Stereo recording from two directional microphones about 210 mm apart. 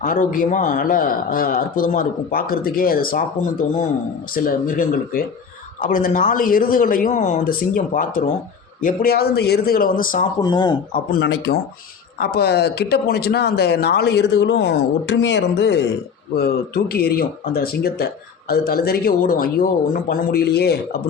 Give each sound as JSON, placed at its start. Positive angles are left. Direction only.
{"t": 0.0, "sound": "a man's voice", "side_deg": 40}
{"t": 4.3, "sound": "a man's voice", "side_deg": 40}
{"t": 10.4, "sound": "speech", "side_deg": 20}
{"t": 10.9, "sound": "speech", "side_deg": 50}